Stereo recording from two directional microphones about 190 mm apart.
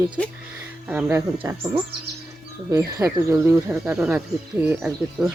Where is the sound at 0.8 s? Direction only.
10° right (ahead or behind).